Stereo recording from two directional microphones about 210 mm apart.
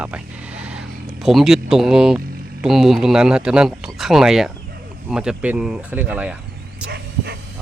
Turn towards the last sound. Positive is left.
turn(degrees=-50)  # may be behind; listen again after turning